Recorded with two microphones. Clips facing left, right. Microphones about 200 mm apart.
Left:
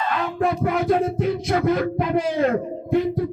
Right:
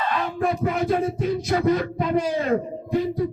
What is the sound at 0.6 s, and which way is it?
Music, 60° left (ahead or behind).